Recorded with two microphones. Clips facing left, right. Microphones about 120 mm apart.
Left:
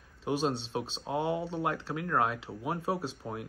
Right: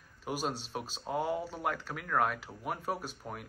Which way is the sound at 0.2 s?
25° left (ahead or behind).